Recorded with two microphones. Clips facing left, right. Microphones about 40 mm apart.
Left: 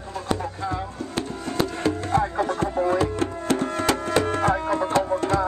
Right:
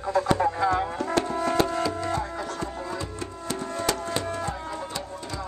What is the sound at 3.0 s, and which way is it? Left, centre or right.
Music, left.